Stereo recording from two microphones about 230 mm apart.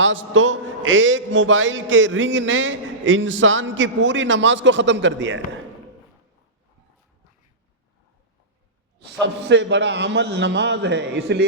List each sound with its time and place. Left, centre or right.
0.0 s a man's voice: right
9.2 s a man's voice: right